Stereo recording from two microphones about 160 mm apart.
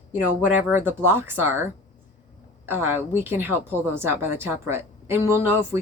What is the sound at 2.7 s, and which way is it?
A woman's voice, 15° right (ahead or behind).